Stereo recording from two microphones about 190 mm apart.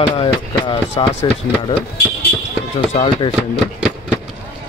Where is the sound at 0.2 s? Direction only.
30° left (ahead or behind).